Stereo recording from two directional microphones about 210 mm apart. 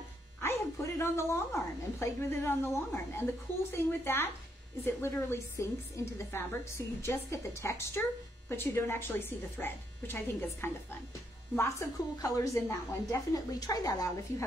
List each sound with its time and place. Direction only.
0.4 s a woman's voice: 15° left (ahead or behind)